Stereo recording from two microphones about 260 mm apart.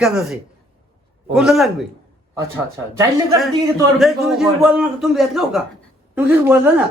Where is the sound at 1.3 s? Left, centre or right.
Centre.